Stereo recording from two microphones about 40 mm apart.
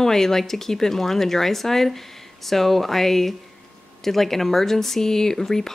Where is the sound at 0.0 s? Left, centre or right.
Centre.